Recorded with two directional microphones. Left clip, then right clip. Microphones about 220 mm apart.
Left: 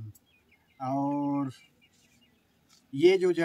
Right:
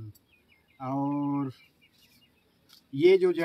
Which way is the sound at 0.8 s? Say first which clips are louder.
Left 1 dB; 15° left (ahead or behind).